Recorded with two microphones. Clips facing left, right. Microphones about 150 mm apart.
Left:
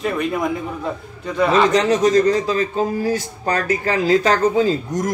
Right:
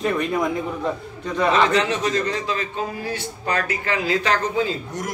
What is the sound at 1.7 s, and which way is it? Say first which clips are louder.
A man's voice: left 6 dB; 40° left (ahead or behind).